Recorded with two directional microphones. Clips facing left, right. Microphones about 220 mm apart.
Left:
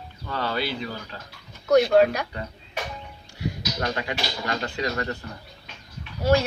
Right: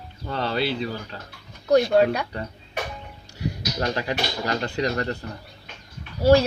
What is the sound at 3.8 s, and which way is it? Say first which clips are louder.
Speech: right 3 dB; 35° right (ahead or behind).